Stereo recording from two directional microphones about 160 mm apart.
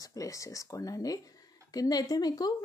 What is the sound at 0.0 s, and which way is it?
Speech, 20° left (ahead or behind).